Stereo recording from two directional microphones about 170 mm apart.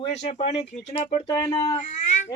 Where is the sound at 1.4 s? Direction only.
20° left (ahead or behind).